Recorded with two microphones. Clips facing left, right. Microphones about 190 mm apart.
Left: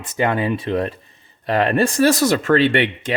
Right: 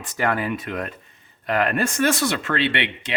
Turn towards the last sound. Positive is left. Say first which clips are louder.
# left 7 dB
turn(degrees=45)  # may be behind; listen again after turning